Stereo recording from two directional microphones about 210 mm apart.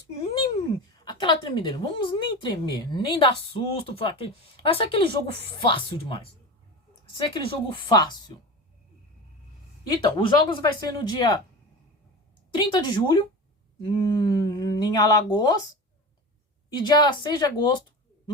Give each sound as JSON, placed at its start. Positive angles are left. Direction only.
{"t": 0.9, "sound": "a woman's voice", "side_deg": 20}
{"t": 9.9, "sound": "speech", "side_deg": 20}
{"t": 12.5, "sound": "a woman's voice", "side_deg": 20}
{"t": 16.6, "sound": "a woman's voice", "side_deg": 20}